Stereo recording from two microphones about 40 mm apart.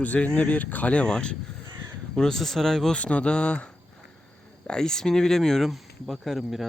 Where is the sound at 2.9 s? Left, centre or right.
Left.